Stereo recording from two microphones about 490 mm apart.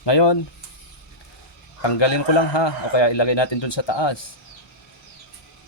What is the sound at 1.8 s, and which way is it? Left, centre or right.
A man's voice, left.